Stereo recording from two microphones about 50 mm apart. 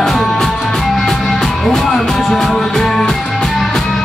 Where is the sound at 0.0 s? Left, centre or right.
Centre.